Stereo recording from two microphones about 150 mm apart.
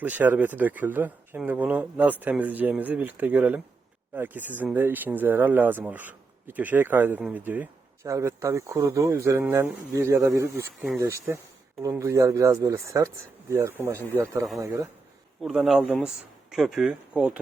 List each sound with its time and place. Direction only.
0.0 s speech: 10° right (ahead or behind)
15.4 s speech: centre (ahead or behind)